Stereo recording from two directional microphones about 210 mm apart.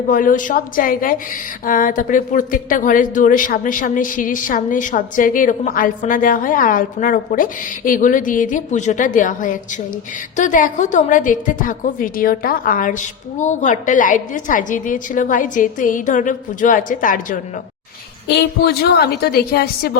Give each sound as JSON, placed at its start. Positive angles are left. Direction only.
{"t": 0.1, "sound": "a woman's voice", "side_deg": 40}